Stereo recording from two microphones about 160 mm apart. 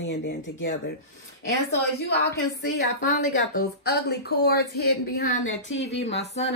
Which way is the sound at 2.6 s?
55° left (ahead or behind).